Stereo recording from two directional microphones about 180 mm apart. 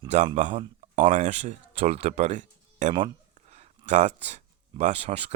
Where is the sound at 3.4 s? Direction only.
35° right (ahead or behind).